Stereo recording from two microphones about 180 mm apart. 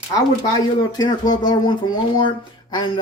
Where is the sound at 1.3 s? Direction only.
25° left (ahead or behind).